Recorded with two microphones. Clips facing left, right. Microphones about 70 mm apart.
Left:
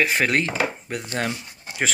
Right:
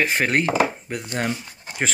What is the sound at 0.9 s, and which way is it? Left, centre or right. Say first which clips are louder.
Speech: right 1 dB; centre.